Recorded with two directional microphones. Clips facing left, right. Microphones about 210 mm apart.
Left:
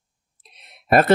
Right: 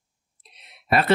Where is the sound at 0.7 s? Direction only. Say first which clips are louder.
Left 6 dB; 45° left (ahead or behind).